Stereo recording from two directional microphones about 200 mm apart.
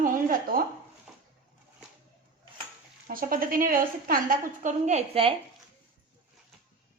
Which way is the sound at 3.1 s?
45° right (ahead or behind).